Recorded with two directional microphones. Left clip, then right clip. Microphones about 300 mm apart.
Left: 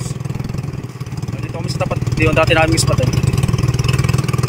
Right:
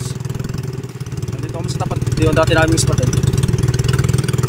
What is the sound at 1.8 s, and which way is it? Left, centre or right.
Vehicle, centre.